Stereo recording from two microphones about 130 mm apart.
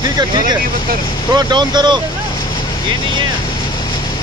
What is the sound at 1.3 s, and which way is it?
Speech, 35° right (ahead or behind).